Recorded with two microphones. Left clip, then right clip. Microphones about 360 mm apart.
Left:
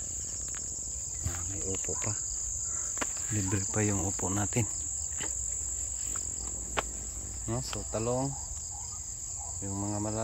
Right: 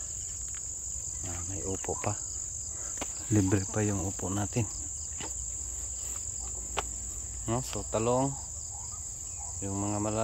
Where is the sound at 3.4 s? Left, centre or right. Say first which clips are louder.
Right 3 dB; centre.